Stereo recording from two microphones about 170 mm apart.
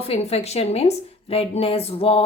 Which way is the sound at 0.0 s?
35° left (ahead or behind).